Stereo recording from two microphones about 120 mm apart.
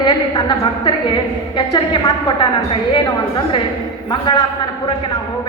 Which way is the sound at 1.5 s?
40° left (ahead or behind).